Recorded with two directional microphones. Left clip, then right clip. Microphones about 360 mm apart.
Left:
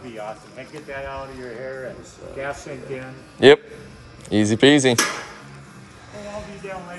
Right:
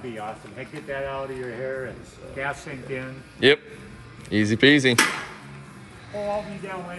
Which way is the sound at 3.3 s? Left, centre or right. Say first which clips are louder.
Left 6 dB; centre.